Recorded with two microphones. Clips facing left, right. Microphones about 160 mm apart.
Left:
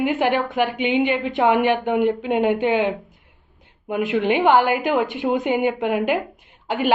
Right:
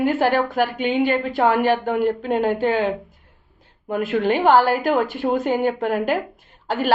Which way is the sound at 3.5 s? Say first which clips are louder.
Even; 15° left (ahead or behind).